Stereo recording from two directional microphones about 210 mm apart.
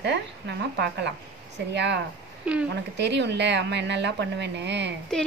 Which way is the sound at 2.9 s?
55° right (ahead or behind).